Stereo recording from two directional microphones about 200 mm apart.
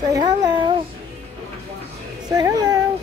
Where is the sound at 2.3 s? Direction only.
20° right (ahead or behind).